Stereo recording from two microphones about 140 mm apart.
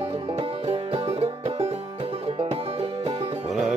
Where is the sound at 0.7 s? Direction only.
45° right (ahead or behind).